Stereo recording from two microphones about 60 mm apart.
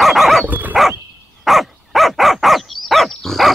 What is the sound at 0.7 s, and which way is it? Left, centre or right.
Dog, centre.